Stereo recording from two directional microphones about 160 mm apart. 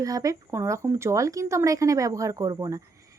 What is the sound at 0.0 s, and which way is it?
Speech, 20° right (ahead or behind).